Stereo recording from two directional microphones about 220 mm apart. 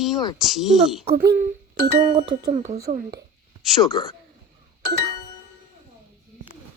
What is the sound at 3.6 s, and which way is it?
Speech, centre (ahead or behind).